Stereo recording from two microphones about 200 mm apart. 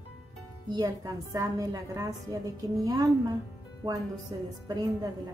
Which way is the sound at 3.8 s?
20° right (ahead or behind).